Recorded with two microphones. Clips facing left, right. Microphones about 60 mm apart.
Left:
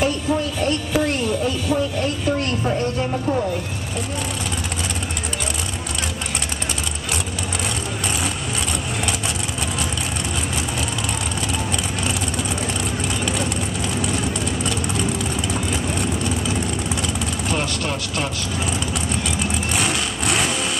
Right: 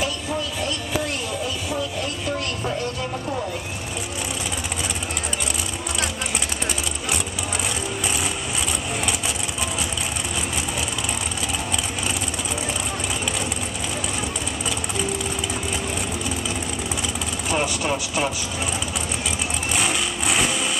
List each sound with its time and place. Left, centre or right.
0.0 s a sound: left
16.0 s vehicle: centre
19.7 s vehicle: centre